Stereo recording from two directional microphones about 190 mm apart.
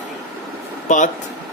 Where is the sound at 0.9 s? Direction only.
40° left (ahead or behind).